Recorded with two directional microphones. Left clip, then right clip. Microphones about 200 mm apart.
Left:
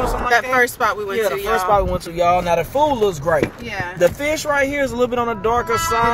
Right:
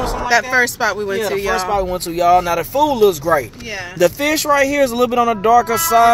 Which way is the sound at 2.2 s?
45° right (ahead or behind).